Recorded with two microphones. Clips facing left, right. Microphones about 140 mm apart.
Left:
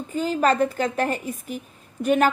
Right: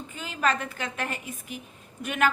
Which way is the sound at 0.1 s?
40° left (ahead or behind).